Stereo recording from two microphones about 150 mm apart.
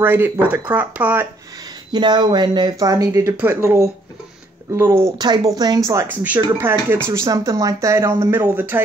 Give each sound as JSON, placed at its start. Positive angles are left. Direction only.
{"t": 0.0, "sound": "speech", "side_deg": -15}
{"t": 1.9, "sound": "speech", "side_deg": -30}
{"t": 5.9, "sound": "speech", "side_deg": -15}